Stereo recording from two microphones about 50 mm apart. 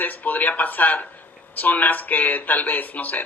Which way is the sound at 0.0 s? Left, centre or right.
Left.